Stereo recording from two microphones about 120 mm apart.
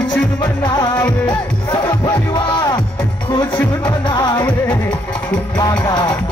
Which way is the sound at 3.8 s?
40° left (ahead or behind).